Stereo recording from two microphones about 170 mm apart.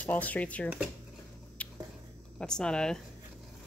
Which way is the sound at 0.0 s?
10° left (ahead or behind).